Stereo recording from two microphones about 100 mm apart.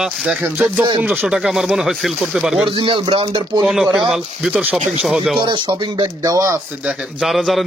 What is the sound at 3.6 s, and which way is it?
Speech, 10° right (ahead or behind).